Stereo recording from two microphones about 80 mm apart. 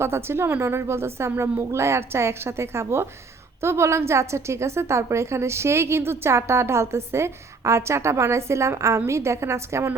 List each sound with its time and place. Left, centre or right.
0.0 s a woman's voice: right